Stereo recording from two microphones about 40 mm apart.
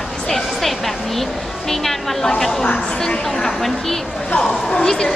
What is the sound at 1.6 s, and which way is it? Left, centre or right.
A woman's voice, centre.